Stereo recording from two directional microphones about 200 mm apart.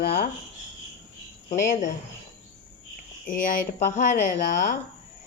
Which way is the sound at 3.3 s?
40° left (ahead or behind).